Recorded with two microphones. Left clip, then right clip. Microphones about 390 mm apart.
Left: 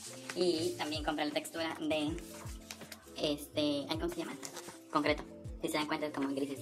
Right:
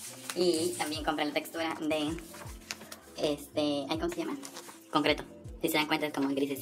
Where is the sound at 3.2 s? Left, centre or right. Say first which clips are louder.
Right 3 dB; left.